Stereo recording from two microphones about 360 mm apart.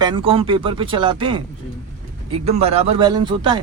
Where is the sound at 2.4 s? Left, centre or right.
Centre.